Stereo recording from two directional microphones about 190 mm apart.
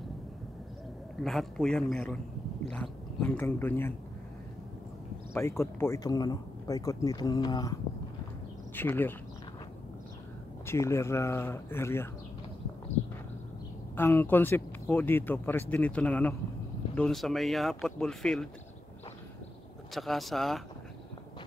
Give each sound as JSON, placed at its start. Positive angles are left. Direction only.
{"t": 1.2, "sound": "speech", "side_deg": 0}
{"t": 5.3, "sound": "speech", "side_deg": 15}
{"t": 8.7, "sound": "speech", "side_deg": 10}
{"t": 10.7, "sound": "speech", "side_deg": 15}
{"t": 13.9, "sound": "speech", "side_deg": 10}
{"t": 19.9, "sound": "speech", "side_deg": 0}